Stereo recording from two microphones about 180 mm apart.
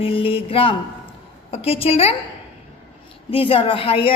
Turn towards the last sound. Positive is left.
turn(degrees=30)  # may be behind; listen again after turning